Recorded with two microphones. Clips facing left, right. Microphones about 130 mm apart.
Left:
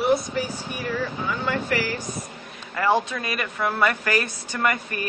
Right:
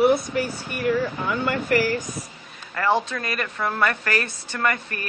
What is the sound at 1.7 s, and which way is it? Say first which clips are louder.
Speech: right 5 dB; 50° right (ahead or behind).